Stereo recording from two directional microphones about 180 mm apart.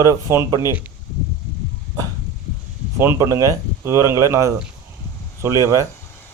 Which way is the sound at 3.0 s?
15° right (ahead or behind).